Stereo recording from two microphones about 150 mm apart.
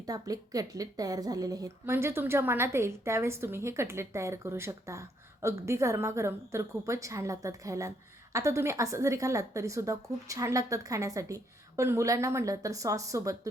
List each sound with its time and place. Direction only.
0.0 s a woman's voice: 25° right (ahead or behind)